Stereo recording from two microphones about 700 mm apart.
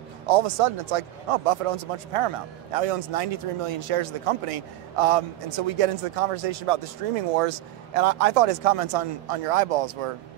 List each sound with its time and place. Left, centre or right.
0.3 s speech: right